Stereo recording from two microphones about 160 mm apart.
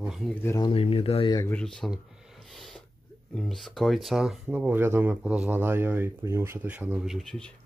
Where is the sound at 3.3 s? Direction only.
Centre (ahead or behind).